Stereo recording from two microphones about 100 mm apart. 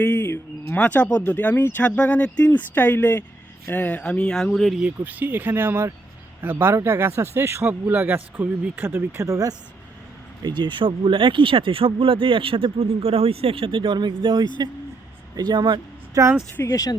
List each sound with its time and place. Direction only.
0.0 s a sound: 20° left (ahead or behind)
0.7 s speech: 15° left (ahead or behind)
4.8 s speech: 15° right (ahead or behind); by 9.6 s 35° right (ahead or behind)
10.4 s speech: 50° right (ahead or behind)
16.2 s speech: 35° right (ahead or behind)
16.6 s speech: 35° left (ahead or behind)